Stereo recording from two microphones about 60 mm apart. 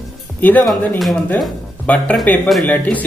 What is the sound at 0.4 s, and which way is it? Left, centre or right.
Speech, left.